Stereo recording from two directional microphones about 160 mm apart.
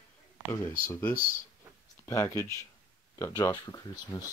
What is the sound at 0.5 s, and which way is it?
Speech, 15° left (ahead or behind).